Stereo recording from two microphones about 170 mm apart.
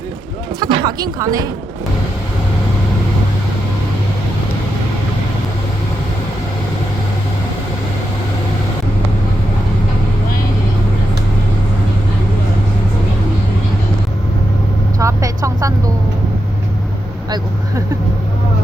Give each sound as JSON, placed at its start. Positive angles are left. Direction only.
{"t": 0.6, "sound": "speech", "side_deg": -25}
{"t": 14.9, "sound": "vehicle", "side_deg": -20}